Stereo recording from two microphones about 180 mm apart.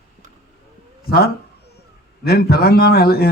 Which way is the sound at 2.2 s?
60° left (ahead or behind).